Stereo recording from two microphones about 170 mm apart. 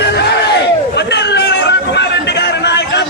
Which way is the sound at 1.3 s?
90° left.